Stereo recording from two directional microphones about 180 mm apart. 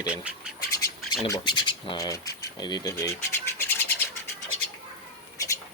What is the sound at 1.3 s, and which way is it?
Speech, 25° left (ahead or behind).